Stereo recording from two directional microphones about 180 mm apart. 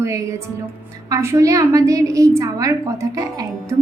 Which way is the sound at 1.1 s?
15° right (ahead or behind).